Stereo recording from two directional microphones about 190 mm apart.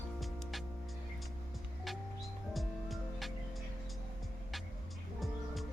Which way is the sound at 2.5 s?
Centre (ahead or behind).